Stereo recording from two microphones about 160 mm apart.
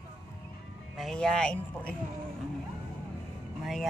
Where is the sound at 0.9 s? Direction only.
5° left (ahead or behind).